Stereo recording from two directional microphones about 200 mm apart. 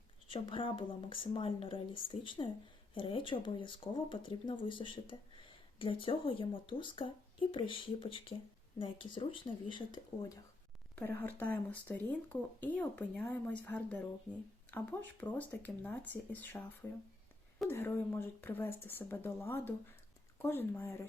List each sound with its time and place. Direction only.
0.3 s speech: 25° left (ahead or behind)
10.9 s speech: 10° left (ahead or behind)
17.7 s speech: 10° left (ahead or behind)